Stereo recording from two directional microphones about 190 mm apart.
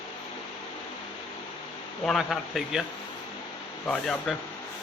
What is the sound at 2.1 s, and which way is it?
Speech, centre (ahead or behind).